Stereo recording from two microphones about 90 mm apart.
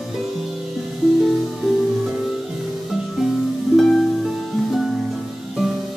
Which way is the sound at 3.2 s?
5° right (ahead or behind).